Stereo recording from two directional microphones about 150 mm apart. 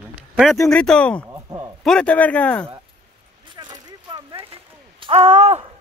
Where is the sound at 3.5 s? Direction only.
30° right (ahead or behind).